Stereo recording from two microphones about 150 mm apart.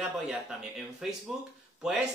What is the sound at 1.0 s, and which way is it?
Speech, 5° right (ahead or behind).